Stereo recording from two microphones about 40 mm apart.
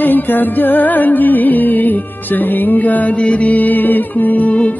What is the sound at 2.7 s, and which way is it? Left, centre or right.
Music, left.